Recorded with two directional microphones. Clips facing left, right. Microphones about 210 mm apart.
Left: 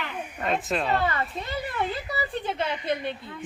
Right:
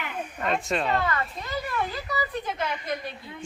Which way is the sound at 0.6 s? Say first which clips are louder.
Even; centre (ahead or behind).